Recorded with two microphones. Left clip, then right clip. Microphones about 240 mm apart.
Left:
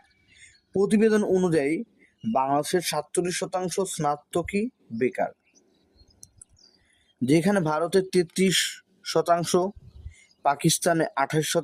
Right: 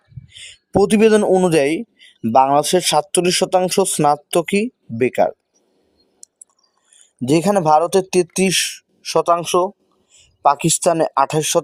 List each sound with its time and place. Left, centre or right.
0.3 s a man's voice: right
7.2 s speech: right